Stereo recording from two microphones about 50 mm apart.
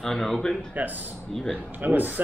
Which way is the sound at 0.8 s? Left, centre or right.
Right.